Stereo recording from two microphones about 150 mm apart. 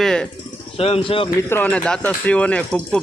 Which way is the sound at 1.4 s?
15° left (ahead or behind).